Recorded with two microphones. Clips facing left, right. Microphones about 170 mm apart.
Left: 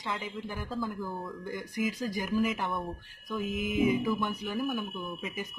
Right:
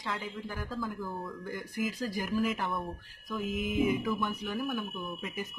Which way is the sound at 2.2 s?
Centre (ahead or behind).